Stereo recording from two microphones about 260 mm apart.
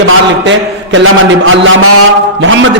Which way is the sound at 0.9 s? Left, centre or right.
Right.